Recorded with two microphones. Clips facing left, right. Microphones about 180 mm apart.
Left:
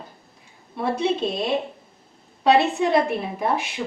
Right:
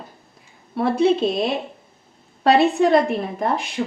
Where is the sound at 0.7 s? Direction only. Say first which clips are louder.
Right 6 dB; 55° right (ahead or behind).